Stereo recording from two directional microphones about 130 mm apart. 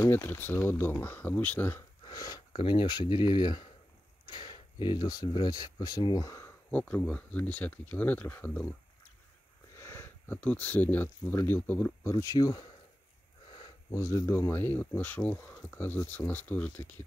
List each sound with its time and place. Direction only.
0.0 s speech: 15° left (ahead or behind)
2.0 s speech: 30° left (ahead or behind)
6.8 s speech: 10° left (ahead or behind)
9.8 s speech: 20° left (ahead or behind)
13.9 s speech: 25° left (ahead or behind)